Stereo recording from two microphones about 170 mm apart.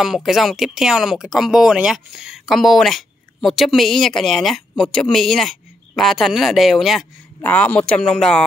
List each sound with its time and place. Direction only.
0.0 s speech: centre (ahead or behind)